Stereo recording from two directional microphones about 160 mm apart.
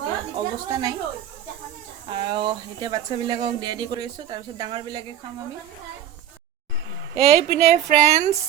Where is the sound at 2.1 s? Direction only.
30° right (ahead or behind).